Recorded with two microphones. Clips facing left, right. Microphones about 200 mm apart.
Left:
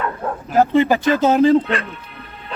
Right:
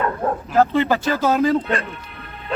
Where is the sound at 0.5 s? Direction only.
15° left (ahead or behind).